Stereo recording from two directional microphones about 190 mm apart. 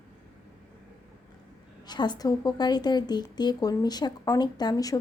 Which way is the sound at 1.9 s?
20° left (ahead or behind).